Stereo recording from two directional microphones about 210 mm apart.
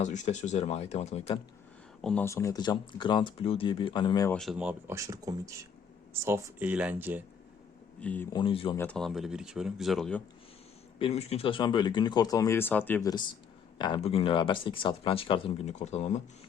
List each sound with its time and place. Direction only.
0.0 s speech: 35° left (ahead or behind)
2.0 s speech: 5° left (ahead or behind); by 4.3 s 20° left (ahead or behind)
4.3 s speech: centre (ahead or behind)
8.0 s speech: 5° left (ahead or behind)
8.3 s speech: 25° left (ahead or behind)
8.7 s speech: 10° left (ahead or behind)
11.0 s speech: 30° left (ahead or behind)